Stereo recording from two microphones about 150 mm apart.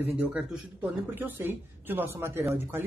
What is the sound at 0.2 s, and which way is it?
Speech, 5° right (ahead or behind).